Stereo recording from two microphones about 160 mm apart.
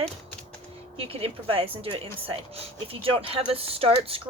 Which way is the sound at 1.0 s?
35° right (ahead or behind).